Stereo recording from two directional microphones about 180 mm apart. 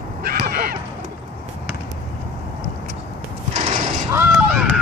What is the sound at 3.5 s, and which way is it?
Mechanisms, 40° right (ahead or behind).